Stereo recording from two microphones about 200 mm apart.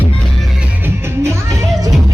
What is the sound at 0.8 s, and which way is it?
Music, 15° right (ahead or behind).